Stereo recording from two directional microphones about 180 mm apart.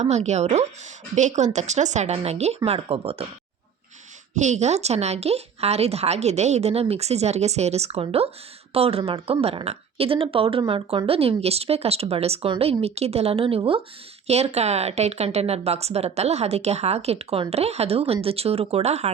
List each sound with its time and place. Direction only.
0.0 s a woman's voice: 40° right (ahead or behind)
4.4 s a woman's voice: 40° right (ahead or behind)